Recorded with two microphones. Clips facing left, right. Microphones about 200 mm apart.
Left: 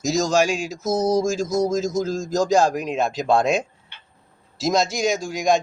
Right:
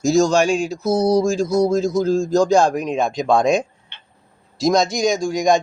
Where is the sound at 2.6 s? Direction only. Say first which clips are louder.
Right 2 dB; 5° left (ahead or behind).